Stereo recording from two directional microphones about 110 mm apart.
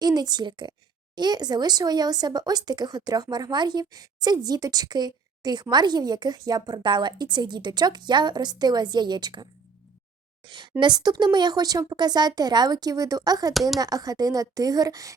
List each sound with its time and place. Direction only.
0.0 s speech: 40° right (ahead or behind)
13.5 s speech: centre (ahead or behind)
13.7 s speech: 35° right (ahead or behind)